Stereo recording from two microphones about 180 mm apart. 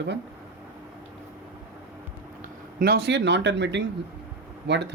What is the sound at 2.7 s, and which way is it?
Speech, 60° right (ahead or behind).